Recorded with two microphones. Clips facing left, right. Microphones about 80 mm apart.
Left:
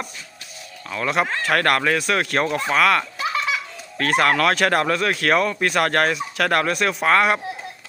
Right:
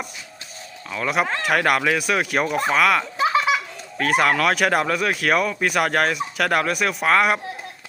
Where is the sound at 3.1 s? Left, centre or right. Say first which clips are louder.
Right 5 dB; right.